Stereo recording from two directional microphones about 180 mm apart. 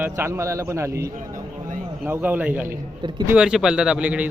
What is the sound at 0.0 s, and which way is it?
A man's voice, 15° right (ahead or behind).